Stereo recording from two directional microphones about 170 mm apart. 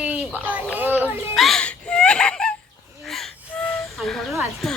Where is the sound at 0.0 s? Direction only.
10° right (ahead or behind).